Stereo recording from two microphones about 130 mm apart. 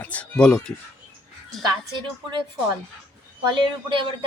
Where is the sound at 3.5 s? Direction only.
40° right (ahead or behind).